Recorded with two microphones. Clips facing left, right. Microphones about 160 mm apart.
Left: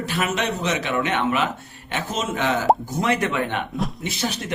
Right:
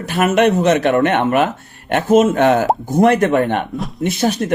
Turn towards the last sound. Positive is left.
turn(degrees=-50)  # may be behind; listen again after turning